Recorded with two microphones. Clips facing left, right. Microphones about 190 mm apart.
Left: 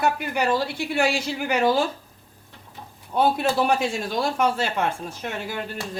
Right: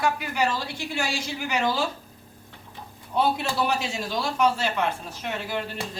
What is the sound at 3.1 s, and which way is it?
Speech, 50° left (ahead or behind).